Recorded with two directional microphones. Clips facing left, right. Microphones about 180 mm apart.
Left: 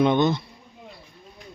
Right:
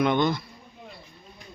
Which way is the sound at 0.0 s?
20° left (ahead or behind).